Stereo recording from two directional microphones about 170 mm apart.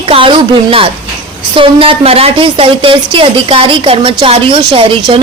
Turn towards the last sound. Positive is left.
turn(degrees=-30)  # may be behind; listen again after turning